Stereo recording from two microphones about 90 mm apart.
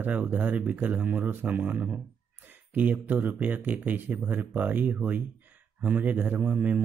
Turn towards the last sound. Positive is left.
turn(degrees=-15)  # may be behind; listen again after turning